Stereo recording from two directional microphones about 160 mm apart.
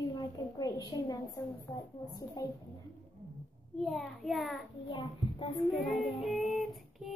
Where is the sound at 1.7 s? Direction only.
25° left (ahead or behind).